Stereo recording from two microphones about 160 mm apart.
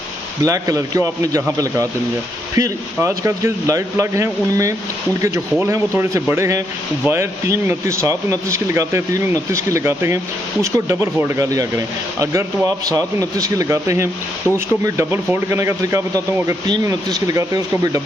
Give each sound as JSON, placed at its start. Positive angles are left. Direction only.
{"t": 0.4, "sound": "speech", "side_deg": -20}
{"t": 2.5, "sound": "speech", "side_deg": -20}